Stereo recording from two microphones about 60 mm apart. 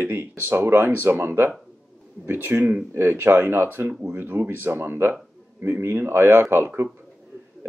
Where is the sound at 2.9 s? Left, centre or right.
Right.